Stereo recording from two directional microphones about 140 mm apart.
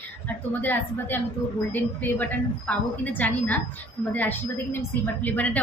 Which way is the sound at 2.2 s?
10° left (ahead or behind).